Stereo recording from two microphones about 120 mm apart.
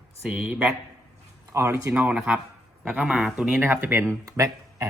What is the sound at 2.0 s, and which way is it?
Speech, 10° right (ahead or behind).